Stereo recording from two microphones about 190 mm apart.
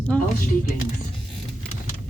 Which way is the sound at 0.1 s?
5° left (ahead or behind).